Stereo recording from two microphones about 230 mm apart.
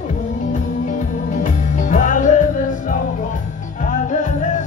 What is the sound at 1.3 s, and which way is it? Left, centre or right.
Music, left.